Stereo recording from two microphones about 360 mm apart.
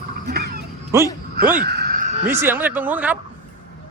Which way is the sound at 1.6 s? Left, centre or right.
Right.